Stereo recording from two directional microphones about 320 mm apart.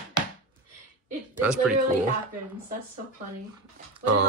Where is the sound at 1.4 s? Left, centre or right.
Centre.